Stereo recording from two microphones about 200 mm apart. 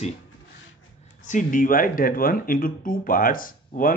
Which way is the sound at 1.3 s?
40° left (ahead or behind).